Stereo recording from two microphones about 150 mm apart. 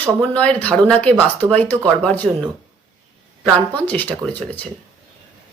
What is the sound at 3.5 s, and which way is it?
Speech, 10° left (ahead or behind).